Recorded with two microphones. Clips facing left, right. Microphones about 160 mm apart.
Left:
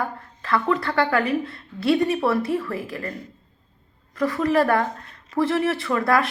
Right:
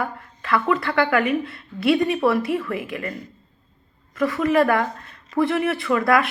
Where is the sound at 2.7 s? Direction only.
15° right (ahead or behind).